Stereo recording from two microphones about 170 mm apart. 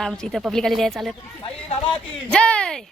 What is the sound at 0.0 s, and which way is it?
Speech, centre (ahead or behind).